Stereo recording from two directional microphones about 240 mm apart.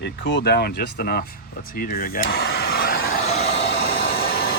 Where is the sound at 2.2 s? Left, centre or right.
Left.